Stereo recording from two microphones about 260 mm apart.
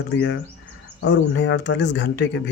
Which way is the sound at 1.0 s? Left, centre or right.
Left.